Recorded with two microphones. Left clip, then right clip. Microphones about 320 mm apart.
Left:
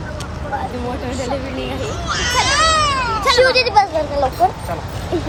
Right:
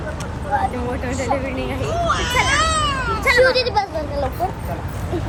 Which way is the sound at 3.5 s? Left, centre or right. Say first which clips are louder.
Left 5 dB; left.